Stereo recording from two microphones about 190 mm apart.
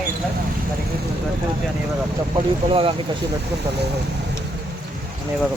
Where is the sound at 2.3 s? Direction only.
30° right (ahead or behind).